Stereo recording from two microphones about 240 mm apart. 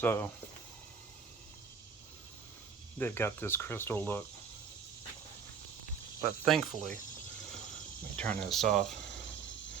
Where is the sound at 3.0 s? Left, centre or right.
Centre.